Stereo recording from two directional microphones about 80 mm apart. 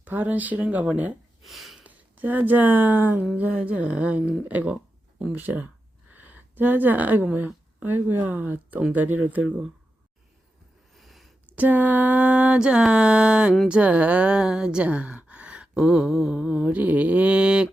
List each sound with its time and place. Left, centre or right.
0.0 s speech: right
1.5 s sniff: centre
1.8 s speech: right
10.9 s a sound: centre
11.4 s speech: centre